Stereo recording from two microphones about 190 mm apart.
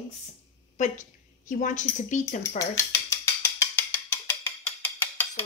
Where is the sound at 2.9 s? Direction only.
10° left (ahead or behind).